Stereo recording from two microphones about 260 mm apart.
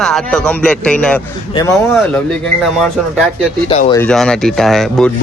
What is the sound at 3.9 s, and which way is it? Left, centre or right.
Speech, centre.